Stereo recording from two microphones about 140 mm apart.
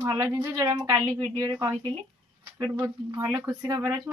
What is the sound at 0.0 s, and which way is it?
Speech, 20° right (ahead or behind).